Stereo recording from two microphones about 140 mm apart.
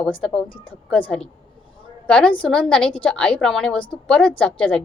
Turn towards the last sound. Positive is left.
turn(degrees=10)  # may be behind; listen again after turning